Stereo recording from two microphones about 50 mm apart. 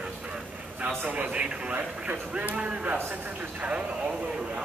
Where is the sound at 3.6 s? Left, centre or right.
Right.